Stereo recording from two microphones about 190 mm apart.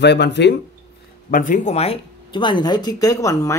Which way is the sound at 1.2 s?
45° left (ahead or behind).